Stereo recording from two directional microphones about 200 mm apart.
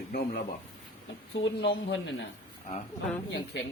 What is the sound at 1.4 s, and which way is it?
Speech, 65° left (ahead or behind).